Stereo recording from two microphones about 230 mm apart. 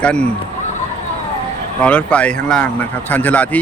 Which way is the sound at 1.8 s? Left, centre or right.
Centre.